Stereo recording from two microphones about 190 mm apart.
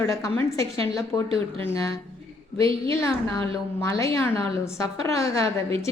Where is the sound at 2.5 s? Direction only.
30° right (ahead or behind).